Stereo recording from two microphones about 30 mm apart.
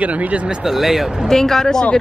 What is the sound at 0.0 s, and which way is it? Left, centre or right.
Speech, right.